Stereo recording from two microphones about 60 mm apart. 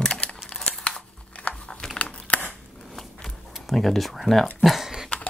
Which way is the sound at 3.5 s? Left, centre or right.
Centre.